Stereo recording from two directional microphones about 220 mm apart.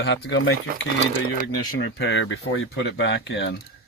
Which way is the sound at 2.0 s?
55° left (ahead or behind).